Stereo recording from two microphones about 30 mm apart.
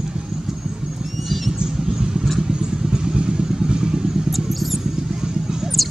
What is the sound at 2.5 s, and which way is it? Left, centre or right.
Vehicle, right.